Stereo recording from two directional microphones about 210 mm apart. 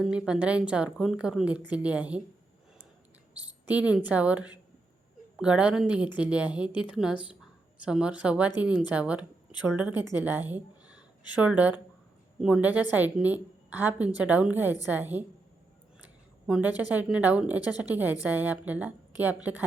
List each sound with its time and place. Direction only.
0.0 s a woman's voice: 5° right (ahead or behind)
3.7 s a woman's voice: 5° right (ahead or behind)
10.0 s a woman's voice: 20° left (ahead or behind)
10.5 s a sound: 5° right (ahead or behind)
11.3 s a woman's voice: 5° right (ahead or behind)
16.0 s a sound: 5° right (ahead or behind)
16.9 s a woman's voice: 5° right (ahead or behind)